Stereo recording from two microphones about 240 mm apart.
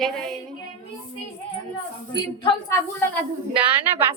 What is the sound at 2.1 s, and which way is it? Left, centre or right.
Speech, centre.